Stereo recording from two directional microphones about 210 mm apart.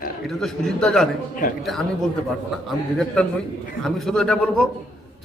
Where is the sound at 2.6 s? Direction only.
5° left (ahead or behind).